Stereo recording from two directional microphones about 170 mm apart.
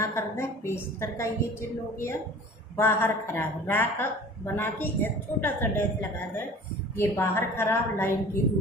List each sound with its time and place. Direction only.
0.0 s a woman's voice: 15° left (ahead or behind)
2.8 s a woman's voice: 15° left (ahead or behind)